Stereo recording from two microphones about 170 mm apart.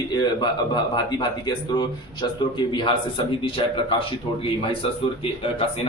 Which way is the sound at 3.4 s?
30° left (ahead or behind).